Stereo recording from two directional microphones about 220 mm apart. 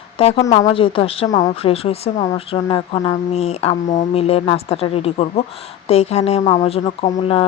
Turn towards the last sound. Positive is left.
turn(degrees=30)  # may be behind; listen again after turning